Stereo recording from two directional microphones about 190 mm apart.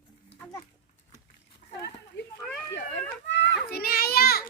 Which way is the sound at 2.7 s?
70° left (ahead or behind).